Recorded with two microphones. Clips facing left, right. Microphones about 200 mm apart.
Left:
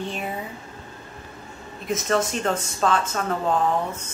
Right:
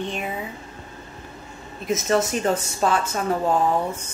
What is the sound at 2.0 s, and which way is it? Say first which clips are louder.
Speech: right 2 dB; 5° right (ahead or behind).